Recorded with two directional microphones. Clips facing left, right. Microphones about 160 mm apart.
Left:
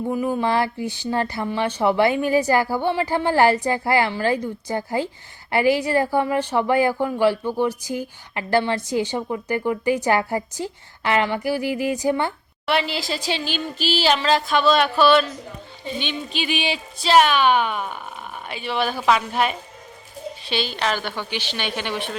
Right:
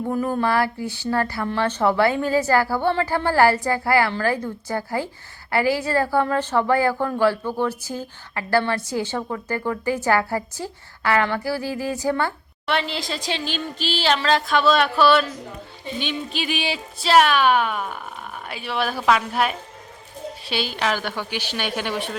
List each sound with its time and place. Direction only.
0.1 s a woman's voice: 5° left (ahead or behind)
0.4 s a woman's voice: 20° left (ahead or behind)
12.6 s a woman's voice: 5° left (ahead or behind)